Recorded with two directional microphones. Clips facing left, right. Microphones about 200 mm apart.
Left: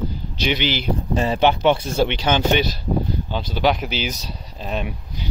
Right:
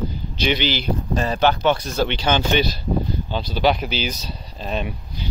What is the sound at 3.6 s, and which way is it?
Speech, 10° left (ahead or behind).